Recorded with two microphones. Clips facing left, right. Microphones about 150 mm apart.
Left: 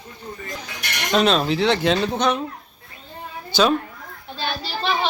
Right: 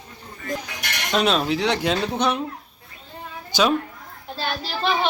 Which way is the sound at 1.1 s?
5° right (ahead or behind).